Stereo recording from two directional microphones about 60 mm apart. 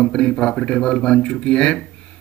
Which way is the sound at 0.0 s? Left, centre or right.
Centre.